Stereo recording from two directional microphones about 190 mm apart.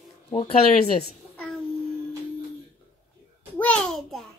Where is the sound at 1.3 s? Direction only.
5° left (ahead or behind).